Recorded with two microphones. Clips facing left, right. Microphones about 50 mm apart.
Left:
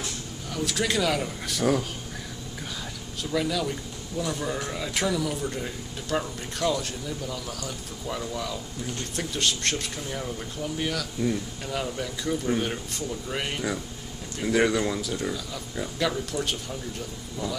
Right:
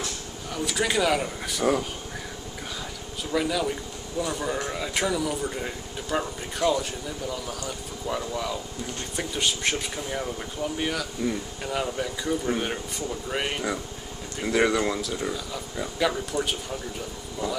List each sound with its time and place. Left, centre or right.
0.0 s speech: centre
3.3 s speech: centre